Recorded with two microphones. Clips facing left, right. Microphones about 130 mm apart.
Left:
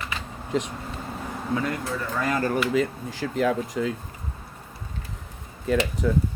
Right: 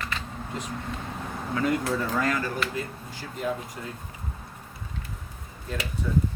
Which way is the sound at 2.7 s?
90° left.